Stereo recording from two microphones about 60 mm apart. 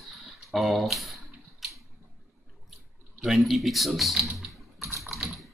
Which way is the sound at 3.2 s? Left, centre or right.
Centre.